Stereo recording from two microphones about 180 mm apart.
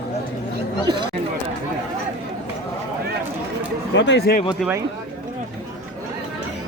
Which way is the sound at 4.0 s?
75° left (ahead or behind).